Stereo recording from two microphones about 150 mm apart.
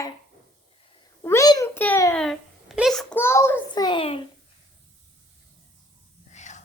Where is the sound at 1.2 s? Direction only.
20° left (ahead or behind).